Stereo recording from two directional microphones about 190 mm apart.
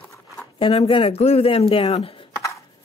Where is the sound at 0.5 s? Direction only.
30° left (ahead or behind).